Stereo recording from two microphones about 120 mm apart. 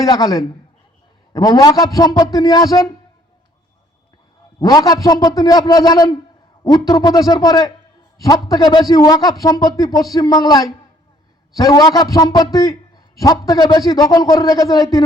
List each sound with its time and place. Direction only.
0.0 s a man's voice: 30° left (ahead or behind)
4.6 s a man's voice: 30° left (ahead or behind)